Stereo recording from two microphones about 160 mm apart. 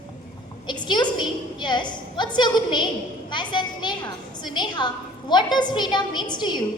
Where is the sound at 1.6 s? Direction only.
30° left (ahead or behind).